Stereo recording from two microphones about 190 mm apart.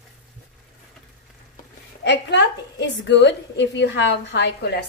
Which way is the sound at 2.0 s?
65° left (ahead or behind).